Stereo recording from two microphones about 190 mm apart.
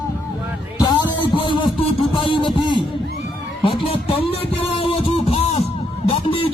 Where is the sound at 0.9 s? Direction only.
25° left (ahead or behind).